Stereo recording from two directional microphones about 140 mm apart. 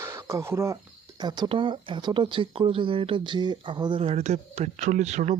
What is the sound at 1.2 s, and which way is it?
Speech, 30° right (ahead or behind).